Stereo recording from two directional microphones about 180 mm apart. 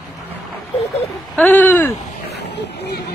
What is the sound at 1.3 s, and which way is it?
Speech, 10° left (ahead or behind).